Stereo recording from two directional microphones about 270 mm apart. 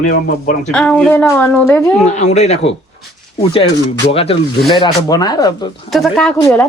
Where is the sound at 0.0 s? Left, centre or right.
Left.